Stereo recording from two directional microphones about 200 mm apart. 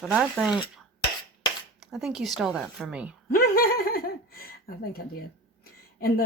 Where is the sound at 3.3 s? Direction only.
50° left (ahead or behind).